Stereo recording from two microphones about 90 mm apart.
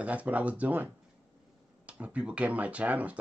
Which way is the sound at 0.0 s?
15° right (ahead or behind).